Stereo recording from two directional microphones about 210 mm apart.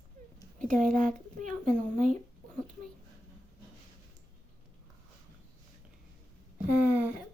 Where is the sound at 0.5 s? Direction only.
40° right (ahead or behind).